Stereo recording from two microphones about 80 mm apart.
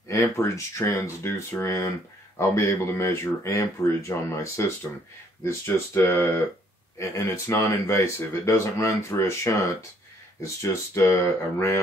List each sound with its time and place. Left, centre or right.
0.1 s speech: left